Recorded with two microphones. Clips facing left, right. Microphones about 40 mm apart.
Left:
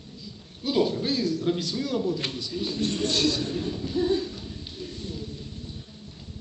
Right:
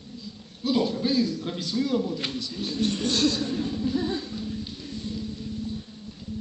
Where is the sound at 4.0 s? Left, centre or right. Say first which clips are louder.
Left 4 dB; right.